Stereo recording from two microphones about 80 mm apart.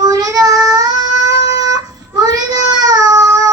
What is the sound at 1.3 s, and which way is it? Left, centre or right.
Child singing, right.